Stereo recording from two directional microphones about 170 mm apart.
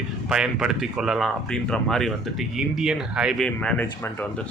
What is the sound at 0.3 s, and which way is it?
Speech, 5° right (ahead or behind).